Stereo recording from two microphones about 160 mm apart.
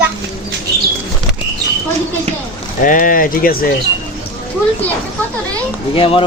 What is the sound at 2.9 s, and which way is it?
Speech, 60° left (ahead or behind).